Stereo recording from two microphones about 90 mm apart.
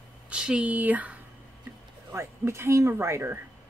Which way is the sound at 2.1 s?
30° right (ahead or behind).